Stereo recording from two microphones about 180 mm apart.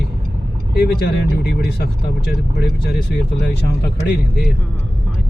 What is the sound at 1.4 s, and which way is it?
Speech, 60° left (ahead or behind).